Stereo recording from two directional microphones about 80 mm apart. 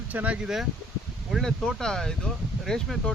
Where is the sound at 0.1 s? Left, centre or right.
Right.